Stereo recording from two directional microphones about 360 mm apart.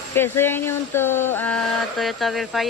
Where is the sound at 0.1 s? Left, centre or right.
Centre.